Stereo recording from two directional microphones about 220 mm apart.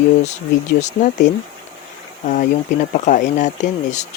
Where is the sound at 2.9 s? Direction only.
35° left (ahead or behind).